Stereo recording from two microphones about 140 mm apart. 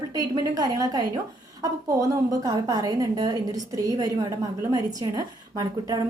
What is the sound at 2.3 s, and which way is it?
A woman's voice, 25° right (ahead or behind).